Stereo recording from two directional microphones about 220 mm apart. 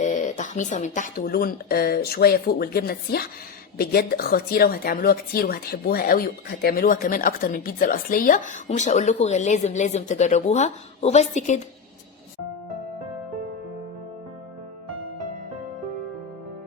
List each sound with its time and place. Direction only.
0.0 s a woman's voice: 35° left (ahead or behind)